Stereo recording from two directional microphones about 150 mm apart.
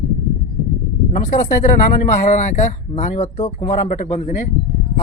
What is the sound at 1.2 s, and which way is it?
Speech, 55° left (ahead or behind).